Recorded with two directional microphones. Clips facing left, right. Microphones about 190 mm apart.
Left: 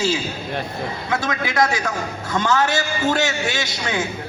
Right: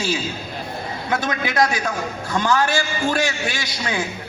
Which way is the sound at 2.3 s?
25° left (ahead or behind).